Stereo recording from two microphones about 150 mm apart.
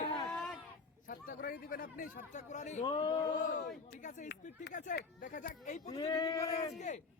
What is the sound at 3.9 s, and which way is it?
Speech, 60° left (ahead or behind).